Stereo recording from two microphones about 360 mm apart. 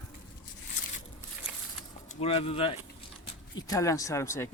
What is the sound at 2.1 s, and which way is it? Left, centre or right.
Speech, centre.